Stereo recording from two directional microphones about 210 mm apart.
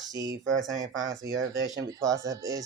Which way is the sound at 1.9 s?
15° right (ahead or behind).